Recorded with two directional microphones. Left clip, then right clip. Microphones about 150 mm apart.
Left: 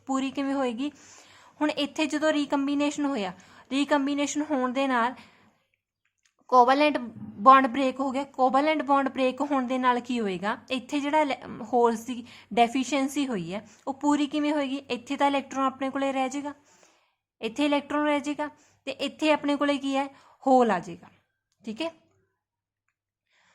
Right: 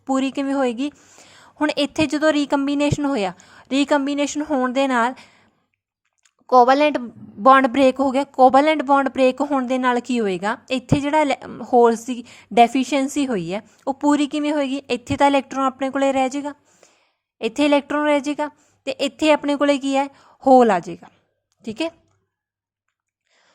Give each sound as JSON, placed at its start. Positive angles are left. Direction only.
{"t": 0.0, "sound": "a woman's voice", "side_deg": -35}
{"t": 0.9, "sound": "speech", "side_deg": -20}
{"t": 1.2, "sound": "a sound", "side_deg": -40}
{"t": 1.6, "sound": "a woman's voice", "side_deg": -40}
{"t": 4.7, "sound": "a woman's voice", "side_deg": -40}
{"t": 16.8, "sound": "a sound", "side_deg": -40}
{"t": 17.3, "sound": "a woman's voice", "side_deg": -40}